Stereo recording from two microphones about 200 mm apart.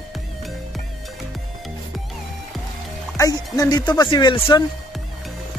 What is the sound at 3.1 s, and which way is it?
Speech, 15° left (ahead or behind).